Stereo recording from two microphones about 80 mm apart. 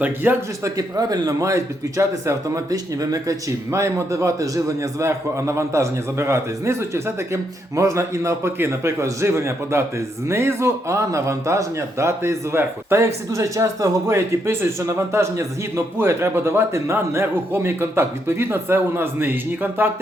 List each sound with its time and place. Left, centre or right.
0.0 s speech: right
0.6 s speech: right